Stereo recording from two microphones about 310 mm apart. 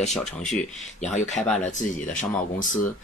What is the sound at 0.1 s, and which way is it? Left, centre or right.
Speech, centre.